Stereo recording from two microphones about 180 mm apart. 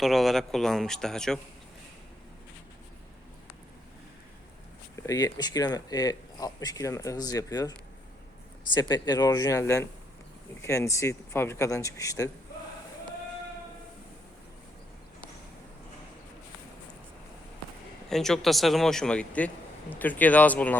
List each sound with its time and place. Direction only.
0.0 s speech: centre (ahead or behind)
5.0 s speech: 20° left (ahead or behind)
8.7 s speech: 20° left (ahead or behind)
18.1 s speech: centre (ahead or behind)